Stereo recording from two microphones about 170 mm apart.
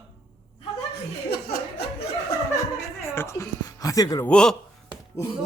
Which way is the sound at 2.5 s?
15° left (ahead or behind).